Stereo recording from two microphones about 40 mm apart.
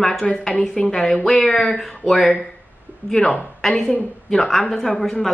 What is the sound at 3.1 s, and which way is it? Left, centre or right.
Speech, left.